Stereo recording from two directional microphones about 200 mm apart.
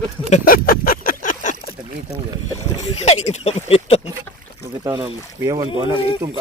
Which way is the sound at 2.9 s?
35° left (ahead or behind).